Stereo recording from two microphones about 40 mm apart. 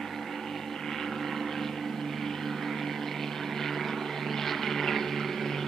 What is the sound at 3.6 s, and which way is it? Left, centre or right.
Vehicle, centre.